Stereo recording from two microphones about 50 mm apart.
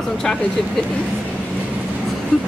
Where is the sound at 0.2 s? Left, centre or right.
Centre.